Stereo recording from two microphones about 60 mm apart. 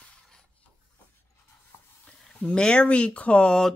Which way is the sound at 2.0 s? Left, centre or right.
Centre.